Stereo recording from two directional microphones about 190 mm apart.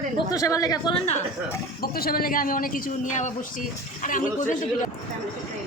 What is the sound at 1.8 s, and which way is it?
A man's voice, 50° left (ahead or behind).